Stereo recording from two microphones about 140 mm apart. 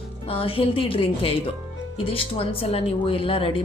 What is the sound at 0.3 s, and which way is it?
A woman's voice, 40° left (ahead or behind).